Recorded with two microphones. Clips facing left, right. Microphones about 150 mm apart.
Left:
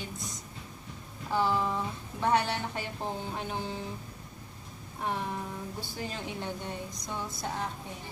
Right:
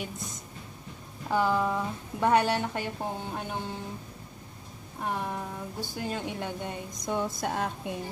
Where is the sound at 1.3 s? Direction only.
50° right (ahead or behind).